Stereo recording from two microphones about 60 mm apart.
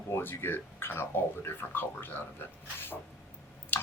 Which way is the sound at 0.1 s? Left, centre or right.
Left.